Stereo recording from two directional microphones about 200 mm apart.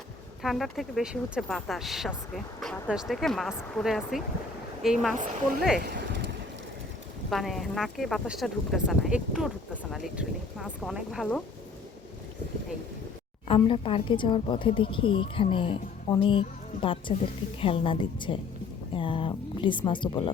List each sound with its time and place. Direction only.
0.4 s speech: centre (ahead or behind)
5.8 s a sound: 55° right (ahead or behind)
7.3 s speech: centre (ahead or behind)
13.5 s speech: 25° left (ahead or behind)